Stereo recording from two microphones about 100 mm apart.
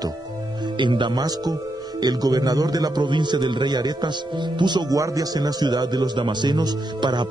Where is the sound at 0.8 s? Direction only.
50° right (ahead or behind).